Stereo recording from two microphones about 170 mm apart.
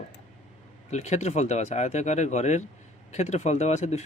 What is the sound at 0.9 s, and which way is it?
Speech, 40° left (ahead or behind).